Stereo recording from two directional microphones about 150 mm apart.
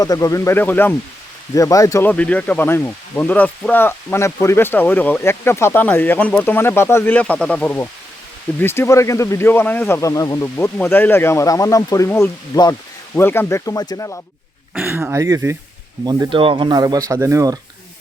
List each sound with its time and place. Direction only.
0.0 s speech: 25° left (ahead or behind)
14.8 s speech: 15° right (ahead or behind)
16.0 s speech: 35° right (ahead or behind)